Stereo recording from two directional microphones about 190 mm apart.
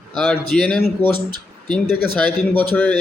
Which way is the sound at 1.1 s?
25° right (ahead or behind).